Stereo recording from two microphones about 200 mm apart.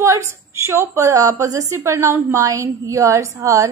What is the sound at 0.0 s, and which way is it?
A woman's voice, 15° right (ahead or behind).